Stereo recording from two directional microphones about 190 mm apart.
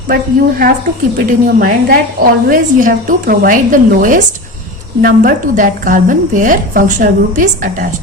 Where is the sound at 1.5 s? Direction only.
45° right (ahead or behind).